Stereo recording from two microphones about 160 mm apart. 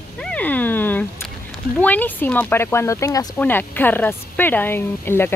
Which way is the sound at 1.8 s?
10° left (ahead or behind).